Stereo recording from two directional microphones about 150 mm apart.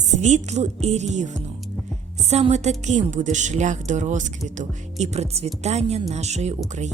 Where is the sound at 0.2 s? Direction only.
50° right (ahead or behind).